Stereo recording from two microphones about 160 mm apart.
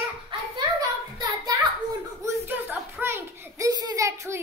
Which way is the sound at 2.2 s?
15° right (ahead or behind).